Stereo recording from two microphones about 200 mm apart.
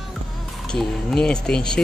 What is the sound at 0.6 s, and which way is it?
Speech, 5° left (ahead or behind).